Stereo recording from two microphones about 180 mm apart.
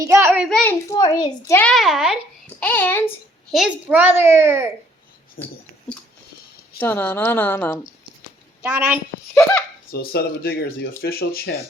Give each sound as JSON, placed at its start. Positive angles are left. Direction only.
{"t": 0.0, "sound": "a child's voice", "side_deg": -15}
{"t": 0.4, "sound": "speech", "side_deg": 5}
{"t": 0.9, "sound": "a child's voice", "side_deg": 20}
{"t": 1.5, "sound": "a child's voice", "side_deg": 0}
{"t": 2.6, "sound": "speech", "side_deg": 10}
{"t": 3.5, "sound": "a child's voice", "side_deg": -5}
{"t": 5.4, "sound": "speech", "side_deg": 55}
{"t": 6.7, "sound": "speech", "side_deg": 10}
{"t": 8.6, "sound": "a child's voice", "side_deg": -10}
{"t": 9.9, "sound": "speech", "side_deg": 60}